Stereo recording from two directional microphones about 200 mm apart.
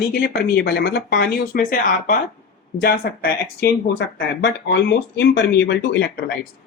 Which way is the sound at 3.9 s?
65° left (ahead or behind).